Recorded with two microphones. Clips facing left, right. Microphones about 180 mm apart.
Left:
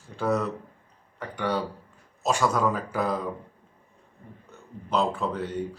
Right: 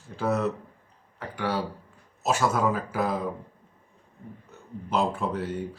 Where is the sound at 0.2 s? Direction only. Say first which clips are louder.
Left 1 dB; 5° right (ahead or behind).